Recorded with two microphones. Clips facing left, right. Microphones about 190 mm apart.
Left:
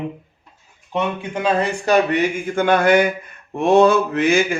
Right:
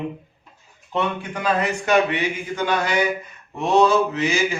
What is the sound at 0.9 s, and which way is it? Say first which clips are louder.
Speech: left 2 dB; 20° left (ahead or behind).